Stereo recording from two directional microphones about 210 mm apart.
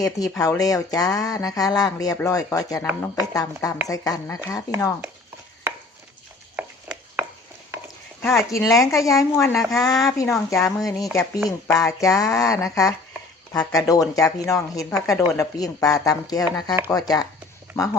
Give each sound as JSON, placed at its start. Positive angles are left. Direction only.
{"t": 0.0, "sound": "speech", "side_deg": 15}
{"t": 6.6, "sound": "a sound", "side_deg": -10}
{"t": 8.2, "sound": "speech", "side_deg": 5}
{"t": 9.6, "sound": "speech", "side_deg": 0}
{"t": 10.1, "sound": "speech", "side_deg": 15}